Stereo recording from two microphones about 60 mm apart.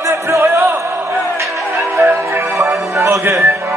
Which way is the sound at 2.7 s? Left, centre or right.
Right.